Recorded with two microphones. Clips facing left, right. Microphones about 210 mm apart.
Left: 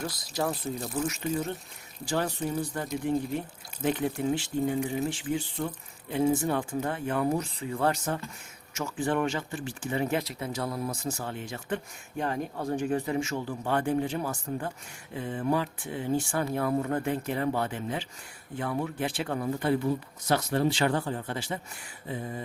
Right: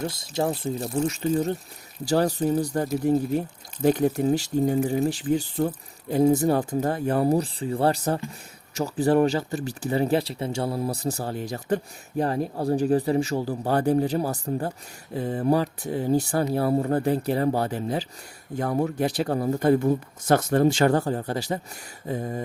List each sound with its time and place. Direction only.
0.0 s speech: 25° right (ahead or behind); by 22.4 s 45° right (ahead or behind)